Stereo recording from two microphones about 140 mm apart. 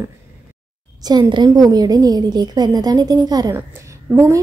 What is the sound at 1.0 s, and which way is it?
A woman's voice, 30° right (ahead or behind).